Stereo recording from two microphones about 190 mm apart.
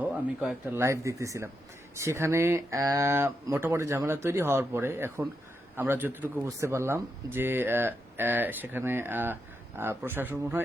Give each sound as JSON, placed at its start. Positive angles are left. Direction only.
{"t": 0.0, "sound": "a man's voice", "side_deg": -10}